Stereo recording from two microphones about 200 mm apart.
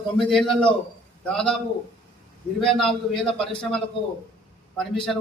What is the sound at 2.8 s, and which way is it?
A man's voice, 5° left (ahead or behind).